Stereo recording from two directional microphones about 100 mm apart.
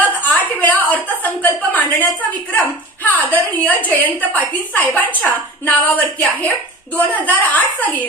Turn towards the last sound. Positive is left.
turn(degrees=15)  # may be behind; listen again after turning